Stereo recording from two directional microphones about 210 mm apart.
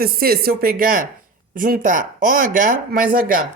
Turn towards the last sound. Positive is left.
turn(degrees=-45)  # may be behind; listen again after turning